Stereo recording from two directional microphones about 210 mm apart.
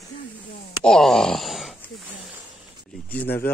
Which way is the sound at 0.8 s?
Centre (ahead or behind).